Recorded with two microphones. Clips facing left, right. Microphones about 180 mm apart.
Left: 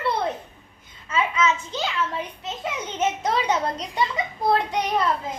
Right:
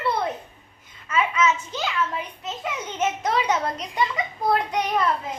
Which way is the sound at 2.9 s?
35° left (ahead or behind).